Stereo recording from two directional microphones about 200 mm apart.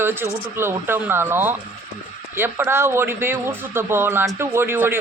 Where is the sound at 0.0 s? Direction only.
10° right (ahead or behind).